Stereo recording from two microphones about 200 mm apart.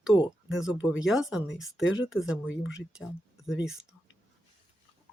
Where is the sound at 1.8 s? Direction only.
75° left (ahead or behind).